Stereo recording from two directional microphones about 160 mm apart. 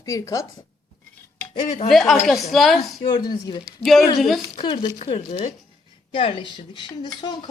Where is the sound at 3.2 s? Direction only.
30° left (ahead or behind).